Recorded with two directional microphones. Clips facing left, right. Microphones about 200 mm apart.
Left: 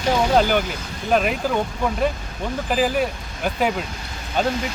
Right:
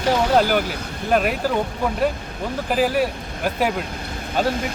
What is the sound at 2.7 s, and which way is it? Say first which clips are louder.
Speech: right 1 dB; 5° right (ahead or behind).